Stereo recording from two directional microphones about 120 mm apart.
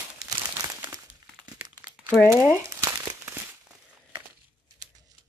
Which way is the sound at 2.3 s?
20° right (ahead or behind).